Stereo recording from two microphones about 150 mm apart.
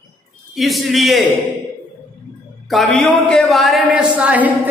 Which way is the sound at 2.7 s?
Centre (ahead or behind).